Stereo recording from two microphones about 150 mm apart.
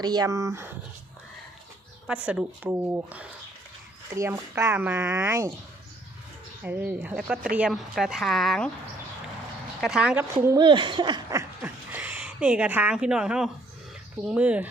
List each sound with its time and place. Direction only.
0.0 s speech: 25° right (ahead or behind)
2.0 s speech: 10° right (ahead or behind)
5.3 s speech: 20° right (ahead or behind)
6.6 s speech: 10° right (ahead or behind)
9.8 s speech: 5° right (ahead or behind)
10.4 s speech: 25° right (ahead or behind)
11.9 s speech: 10° right (ahead or behind)